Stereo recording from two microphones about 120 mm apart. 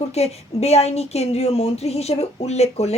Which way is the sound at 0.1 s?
60° left (ahead or behind).